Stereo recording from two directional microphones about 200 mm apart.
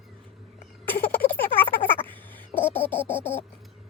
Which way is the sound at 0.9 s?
10° left (ahead or behind).